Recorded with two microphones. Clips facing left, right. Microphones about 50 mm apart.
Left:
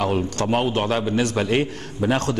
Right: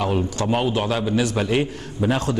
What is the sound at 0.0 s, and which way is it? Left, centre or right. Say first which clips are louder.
A man's voice: even; left.